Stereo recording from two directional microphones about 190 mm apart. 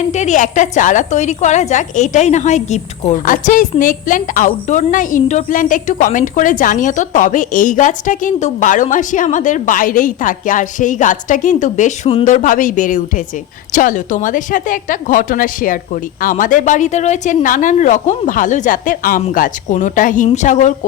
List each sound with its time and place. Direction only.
0.0 s a woman's voice: 40° left (ahead or behind)
3.2 s a woman's voice: 45° left (ahead or behind)